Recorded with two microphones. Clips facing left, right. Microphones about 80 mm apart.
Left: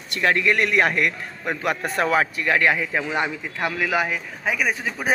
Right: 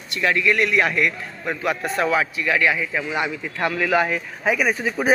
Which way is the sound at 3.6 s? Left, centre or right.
Centre.